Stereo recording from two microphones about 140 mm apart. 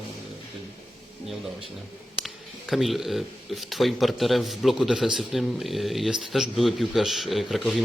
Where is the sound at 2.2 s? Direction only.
Centre (ahead or behind).